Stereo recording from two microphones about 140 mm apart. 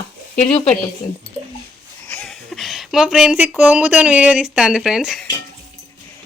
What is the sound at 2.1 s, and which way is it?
Speech, 5° left (ahead or behind).